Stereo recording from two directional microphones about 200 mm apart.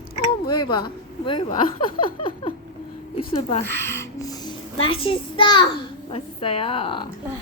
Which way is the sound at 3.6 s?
10° left (ahead or behind).